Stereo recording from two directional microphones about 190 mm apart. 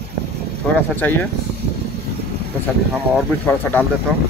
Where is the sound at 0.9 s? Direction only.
10° left (ahead or behind).